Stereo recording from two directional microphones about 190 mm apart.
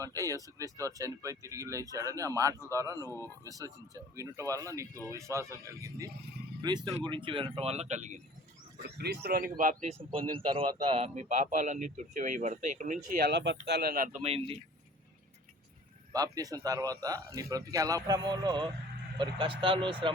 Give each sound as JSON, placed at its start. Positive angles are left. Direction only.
{"t": 0.0, "sound": "a man's voice", "side_deg": -15}
{"t": 9.0, "sound": "speech", "side_deg": -55}
{"t": 10.0, "sound": "a man's voice", "side_deg": -30}
{"t": 13.1, "sound": "speech", "side_deg": -55}
{"t": 14.2, "sound": "a man's voice", "side_deg": -30}
{"t": 16.1, "sound": "speech", "side_deg": -20}